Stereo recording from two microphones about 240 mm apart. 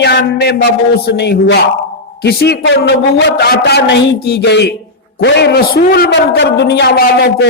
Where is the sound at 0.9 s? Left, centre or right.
Left.